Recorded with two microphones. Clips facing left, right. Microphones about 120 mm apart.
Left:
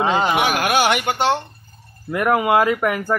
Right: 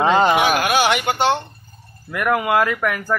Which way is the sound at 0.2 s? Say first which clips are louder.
Right 3 dB; 10° left (ahead or behind).